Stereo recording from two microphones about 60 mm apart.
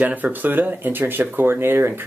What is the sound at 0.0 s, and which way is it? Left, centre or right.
Speech, right.